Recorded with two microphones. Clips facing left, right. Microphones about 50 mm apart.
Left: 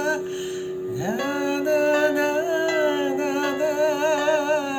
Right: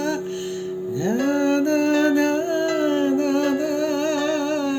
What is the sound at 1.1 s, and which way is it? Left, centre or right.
Music, centre.